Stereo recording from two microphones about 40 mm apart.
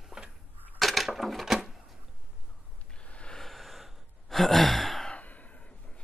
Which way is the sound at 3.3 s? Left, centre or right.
Centre.